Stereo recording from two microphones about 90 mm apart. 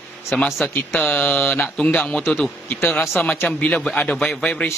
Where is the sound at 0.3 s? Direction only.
20° left (ahead or behind).